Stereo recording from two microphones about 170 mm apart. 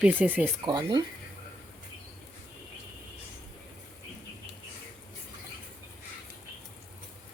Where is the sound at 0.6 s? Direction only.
25° right (ahead or behind).